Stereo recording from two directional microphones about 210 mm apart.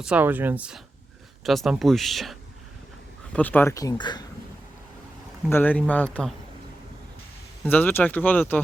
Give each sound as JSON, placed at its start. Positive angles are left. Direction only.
{"t": 0.0, "sound": "speech", "side_deg": -5}
{"t": 5.5, "sound": "speech", "side_deg": 10}
{"t": 7.6, "sound": "speech", "side_deg": 10}